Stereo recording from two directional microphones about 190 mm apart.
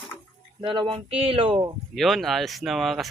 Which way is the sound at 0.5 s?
25° right (ahead or behind).